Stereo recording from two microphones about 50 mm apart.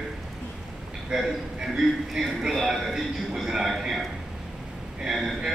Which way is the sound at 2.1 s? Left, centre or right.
Centre.